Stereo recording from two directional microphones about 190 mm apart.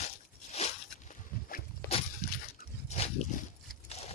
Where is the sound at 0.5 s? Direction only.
35° left (ahead or behind).